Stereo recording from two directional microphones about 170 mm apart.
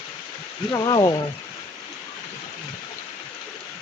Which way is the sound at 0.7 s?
25° left (ahead or behind).